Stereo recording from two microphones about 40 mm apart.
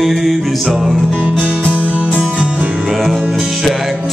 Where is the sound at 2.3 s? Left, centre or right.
Right.